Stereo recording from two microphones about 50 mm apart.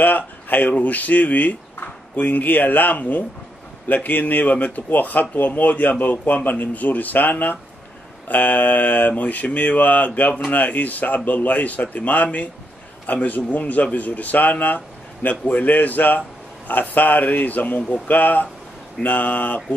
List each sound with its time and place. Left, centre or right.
0.0 s speech: left
17.7 s speech: left
18.0 s speech: left